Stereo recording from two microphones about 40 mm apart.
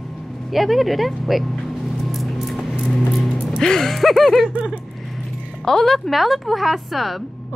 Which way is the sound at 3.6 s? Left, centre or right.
Centre.